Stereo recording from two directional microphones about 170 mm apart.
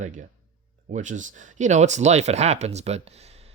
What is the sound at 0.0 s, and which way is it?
Speech, 45° right (ahead or behind).